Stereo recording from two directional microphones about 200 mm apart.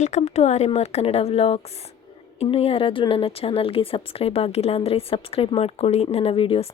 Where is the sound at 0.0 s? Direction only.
35° left (ahead or behind).